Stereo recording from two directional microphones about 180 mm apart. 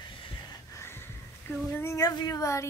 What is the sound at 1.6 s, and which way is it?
Speech, 15° left (ahead or behind).